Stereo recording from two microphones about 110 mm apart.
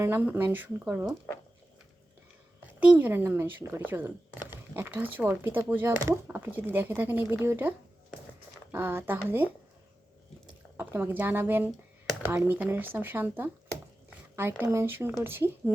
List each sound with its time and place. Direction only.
0.0 s speech: 20° right (ahead or behind)
2.8 s speech: 15° right (ahead or behind)
8.7 s speech: 20° right (ahead or behind)
10.8 s speech: 20° right (ahead or behind)
14.6 s speech: 20° right (ahead or behind)